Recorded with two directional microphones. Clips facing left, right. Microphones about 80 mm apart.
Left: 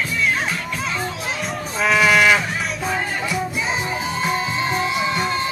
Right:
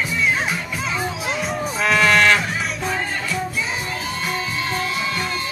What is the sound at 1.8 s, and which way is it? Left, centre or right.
Cattle, centre.